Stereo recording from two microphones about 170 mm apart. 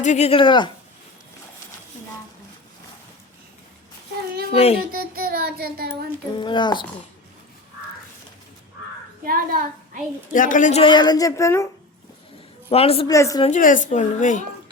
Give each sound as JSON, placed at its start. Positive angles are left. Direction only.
{"t": 0.0, "sound": "speech", "side_deg": 40}
{"t": 4.5, "sound": "speech", "side_deg": 35}
{"t": 4.9, "sound": "child singing", "side_deg": -65}
{"t": 6.3, "sound": "a woman's voice", "side_deg": 25}
{"t": 9.2, "sound": "a child's voice", "side_deg": -55}
{"t": 10.3, "sound": "a woman's voice", "side_deg": 50}
{"t": 12.6, "sound": "a woman's voice", "side_deg": 35}
{"t": 13.1, "sound": "a woman's voice", "side_deg": 20}
{"t": 13.5, "sound": "speech", "side_deg": 50}